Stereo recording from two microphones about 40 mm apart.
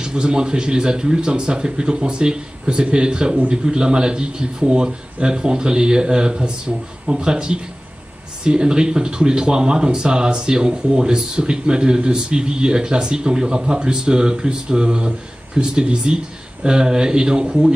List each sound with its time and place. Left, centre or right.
0.0 s speech: right